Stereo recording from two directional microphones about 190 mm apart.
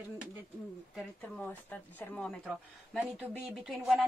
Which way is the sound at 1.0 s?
5° left (ahead or behind).